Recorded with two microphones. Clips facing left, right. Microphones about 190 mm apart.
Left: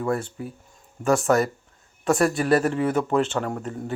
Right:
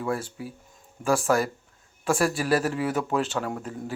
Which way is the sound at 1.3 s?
5° right (ahead or behind).